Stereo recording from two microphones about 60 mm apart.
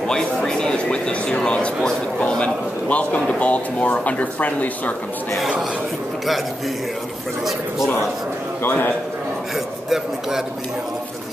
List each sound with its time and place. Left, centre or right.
0.1 s a sound: centre
2.1 s a man's voice: centre
8.6 s a man's voice: left
9.8 s speech: centre